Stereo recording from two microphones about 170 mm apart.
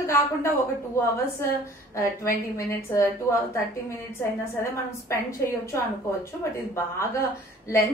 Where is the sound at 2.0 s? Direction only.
15° left (ahead or behind).